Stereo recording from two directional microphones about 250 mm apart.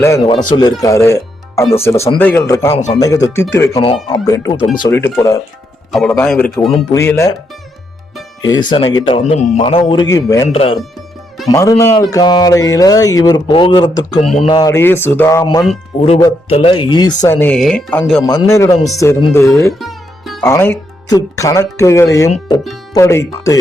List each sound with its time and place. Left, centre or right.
0.0 s speech: centre
5.9 s a man's voice: centre
8.4 s speech: centre
11.5 s speech: centre
19.8 s music: centre
20.5 s speech: centre